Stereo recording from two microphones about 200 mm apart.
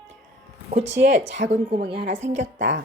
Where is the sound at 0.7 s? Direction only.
35° right (ahead or behind).